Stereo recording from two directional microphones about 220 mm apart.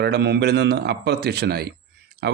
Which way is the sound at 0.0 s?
50° right (ahead or behind).